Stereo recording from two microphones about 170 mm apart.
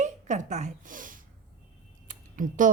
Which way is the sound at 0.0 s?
45° right (ahead or behind).